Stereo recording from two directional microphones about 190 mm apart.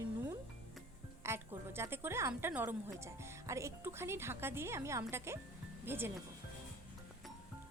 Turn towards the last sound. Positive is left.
turn(degrees=-10)  # may be behind; listen again after turning